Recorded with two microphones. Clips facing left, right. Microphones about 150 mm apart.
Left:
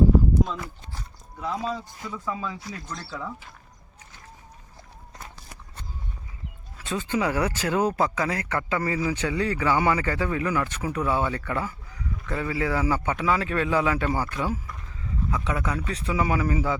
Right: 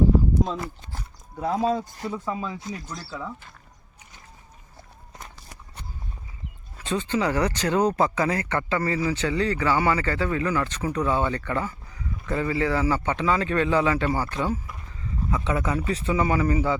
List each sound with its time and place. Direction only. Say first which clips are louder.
0.4 s speech: right 3 dB; 30° right (ahead or behind)
1.4 s speech: right 6 dB; 45° right (ahead or behind)
2.0 s speech: right 1 dB; 30° right (ahead or behind)
2.9 s speech: even; 5° right (ahead or behind)
6.8 s speech: right 1 dB; 5° left (ahead or behind)
16.1 s speech: right 1 dB; 5° left (ahead or behind)